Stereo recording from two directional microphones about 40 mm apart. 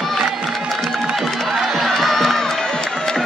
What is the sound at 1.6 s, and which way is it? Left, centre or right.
Crowd, centre.